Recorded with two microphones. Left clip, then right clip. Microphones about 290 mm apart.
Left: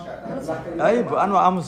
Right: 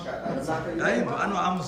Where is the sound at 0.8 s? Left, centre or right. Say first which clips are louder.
Left 8 dB; centre.